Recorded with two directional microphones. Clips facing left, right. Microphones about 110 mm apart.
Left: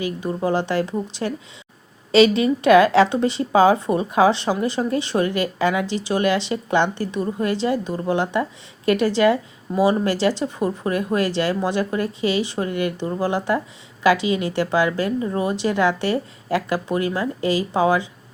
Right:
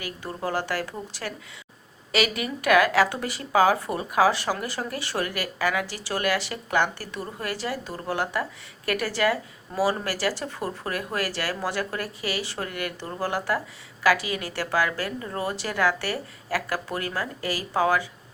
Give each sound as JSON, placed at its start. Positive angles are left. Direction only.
{"t": 0.0, "sound": "speech", "side_deg": 20}